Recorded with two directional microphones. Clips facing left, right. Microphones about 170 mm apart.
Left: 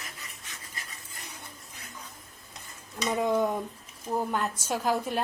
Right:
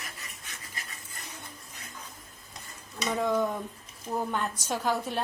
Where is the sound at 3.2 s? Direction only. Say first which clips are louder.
Left 1 dB; 15° left (ahead or behind).